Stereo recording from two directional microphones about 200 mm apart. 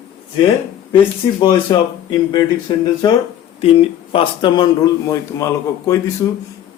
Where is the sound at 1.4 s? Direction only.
20° left (ahead or behind).